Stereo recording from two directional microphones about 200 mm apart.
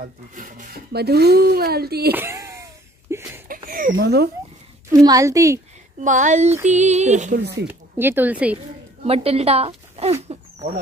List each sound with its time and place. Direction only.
0.0 s speech: 45° right (ahead or behind)
2.1 s a sound: 15° right (ahead or behind)
3.4 s a sound: 45° right (ahead or behind)
3.9 s speech: 55° right (ahead or behind)
4.9 s speech: 15° right (ahead or behind)
5.9 s speech: 40° right (ahead or behind)
7.6 s speech: 10° right (ahead or behind)
9.0 s speech: 30° right (ahead or behind)
10.2 s a sound: 30° right (ahead or behind)